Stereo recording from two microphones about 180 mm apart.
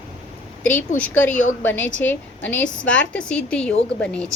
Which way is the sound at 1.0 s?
10° left (ahead or behind).